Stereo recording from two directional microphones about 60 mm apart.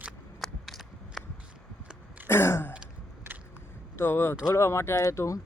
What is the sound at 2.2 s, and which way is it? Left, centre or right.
Throat clearing, left.